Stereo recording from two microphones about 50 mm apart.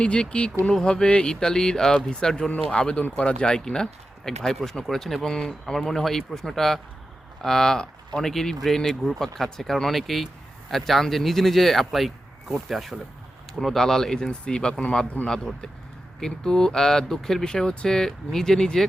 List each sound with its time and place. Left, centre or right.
0.0 s speech: left
15.3 s speech: centre